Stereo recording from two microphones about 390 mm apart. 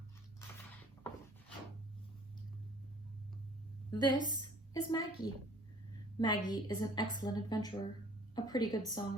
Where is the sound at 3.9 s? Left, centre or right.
Centre.